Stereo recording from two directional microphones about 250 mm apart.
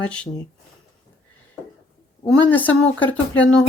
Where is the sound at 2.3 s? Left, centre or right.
Centre.